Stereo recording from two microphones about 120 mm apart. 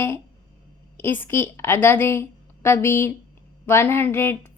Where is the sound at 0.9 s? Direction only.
20° left (ahead or behind).